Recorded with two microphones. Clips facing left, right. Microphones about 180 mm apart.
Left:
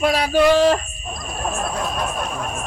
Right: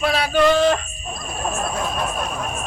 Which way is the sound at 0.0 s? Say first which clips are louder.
Left 1 dB; 40° left (ahead or behind).